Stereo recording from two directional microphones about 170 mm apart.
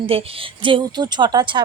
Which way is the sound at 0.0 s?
35° right (ahead or behind).